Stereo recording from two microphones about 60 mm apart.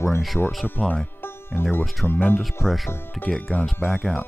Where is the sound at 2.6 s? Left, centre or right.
Centre.